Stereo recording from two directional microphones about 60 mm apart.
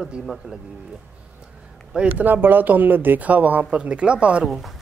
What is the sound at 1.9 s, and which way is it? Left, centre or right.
Speech, centre.